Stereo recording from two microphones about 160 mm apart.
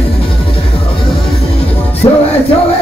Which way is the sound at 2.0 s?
30° left (ahead or behind).